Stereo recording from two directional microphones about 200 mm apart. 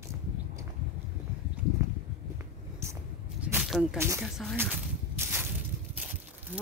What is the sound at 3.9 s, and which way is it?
Speech, 10° right (ahead or behind).